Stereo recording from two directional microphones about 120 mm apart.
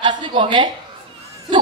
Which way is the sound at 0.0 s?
45° right (ahead or behind).